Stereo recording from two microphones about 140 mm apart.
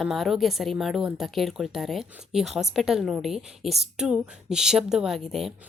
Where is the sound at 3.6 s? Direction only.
50° right (ahead or behind).